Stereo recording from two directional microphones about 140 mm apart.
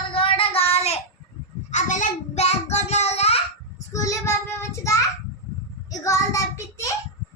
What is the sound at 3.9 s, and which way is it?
Child singing, 20° left (ahead or behind).